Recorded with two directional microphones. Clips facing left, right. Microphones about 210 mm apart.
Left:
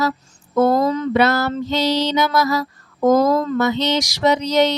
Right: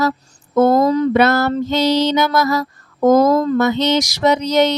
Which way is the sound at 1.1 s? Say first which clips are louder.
Right 3 dB; 50° right (ahead or behind).